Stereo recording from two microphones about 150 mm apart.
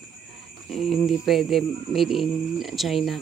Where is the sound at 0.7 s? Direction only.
Centre (ahead or behind).